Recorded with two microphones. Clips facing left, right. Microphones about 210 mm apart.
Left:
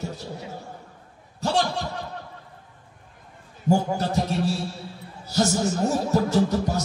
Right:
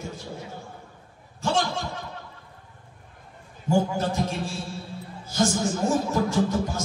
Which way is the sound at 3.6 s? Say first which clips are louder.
Left 1 dB; 40° left (ahead or behind).